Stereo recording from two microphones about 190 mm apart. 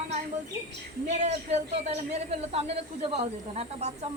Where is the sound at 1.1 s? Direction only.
35° right (ahead or behind).